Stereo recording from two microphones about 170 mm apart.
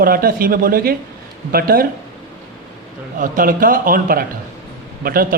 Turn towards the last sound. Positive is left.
turn(degrees=-60)  # may be behind; listen again after turning